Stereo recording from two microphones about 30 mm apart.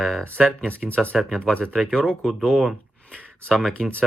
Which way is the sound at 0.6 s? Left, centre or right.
Left.